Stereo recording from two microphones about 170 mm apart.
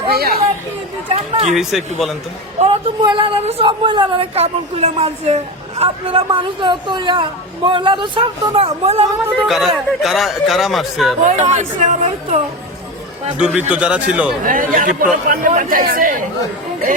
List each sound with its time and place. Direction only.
0.1 s speech: 65° right (ahead or behind)
1.0 s a woman's voice: 35° right (ahead or behind)
1.5 s speech: centre (ahead or behind)
2.6 s a woman's voice: 30° right (ahead or behind)
9.5 s speech: centre (ahead or behind)
11.3 s speech: 40° right (ahead or behind)
13.4 s speech: 5° right (ahead or behind)
14.4 s speech: 55° right (ahead or behind)